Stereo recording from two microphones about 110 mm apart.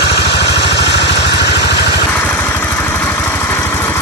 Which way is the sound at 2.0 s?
15° left (ahead or behind).